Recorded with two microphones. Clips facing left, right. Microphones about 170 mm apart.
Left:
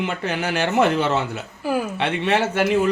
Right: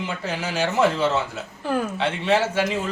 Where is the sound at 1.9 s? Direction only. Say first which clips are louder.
Even; 60° left (ahead or behind).